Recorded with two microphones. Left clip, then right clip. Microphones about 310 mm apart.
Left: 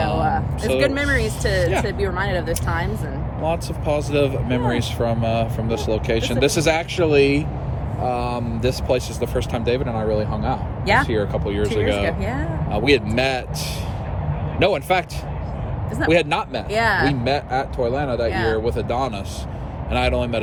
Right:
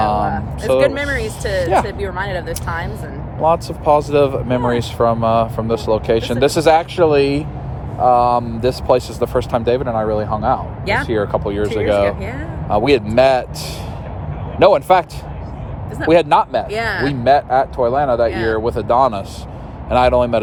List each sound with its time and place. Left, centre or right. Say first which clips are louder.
0.3 s speech: right 3 dB; centre
3.4 s speech: right 9 dB; centre
12.0 s speech: right 4 dB; centre
12.7 s speech: right 6 dB; centre
16.0 s speech: right 7 dB; centre
16.6 s speech: left 1 dB; centre
17.2 s speech: right 9 dB; centre